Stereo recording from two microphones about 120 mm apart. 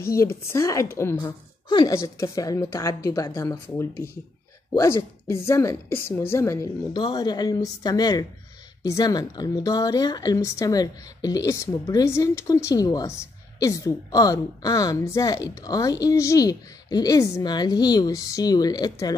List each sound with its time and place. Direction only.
0.0 s speech: 20° left (ahead or behind)
1.1 s a woman's voice: 35° left (ahead or behind)
7.0 s a woman's voice: 40° left (ahead or behind)